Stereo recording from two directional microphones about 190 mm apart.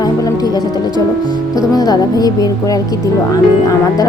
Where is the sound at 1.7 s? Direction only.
20° left (ahead or behind).